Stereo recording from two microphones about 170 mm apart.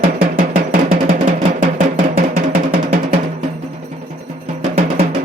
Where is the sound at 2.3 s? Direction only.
55° right (ahead or behind).